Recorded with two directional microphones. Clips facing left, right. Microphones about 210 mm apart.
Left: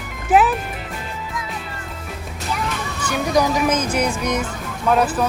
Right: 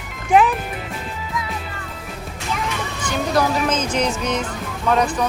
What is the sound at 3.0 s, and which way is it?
Speech, 10° left (ahead or behind).